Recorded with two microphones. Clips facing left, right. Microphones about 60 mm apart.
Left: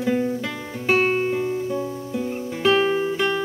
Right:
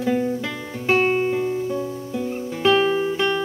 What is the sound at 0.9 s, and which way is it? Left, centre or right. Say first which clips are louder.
Music: right 1 dB; centre.